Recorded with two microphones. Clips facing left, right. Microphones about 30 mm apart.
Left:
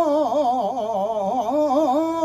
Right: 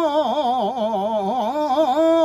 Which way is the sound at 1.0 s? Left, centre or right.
Right.